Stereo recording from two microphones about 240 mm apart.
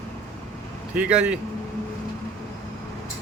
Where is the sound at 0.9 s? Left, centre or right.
Centre.